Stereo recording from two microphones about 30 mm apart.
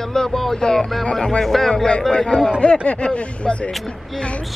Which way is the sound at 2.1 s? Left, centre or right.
Left.